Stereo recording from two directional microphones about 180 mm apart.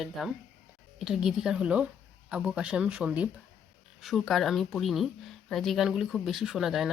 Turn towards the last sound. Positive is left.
turn(degrees=0)  # may be behind; listen again after turning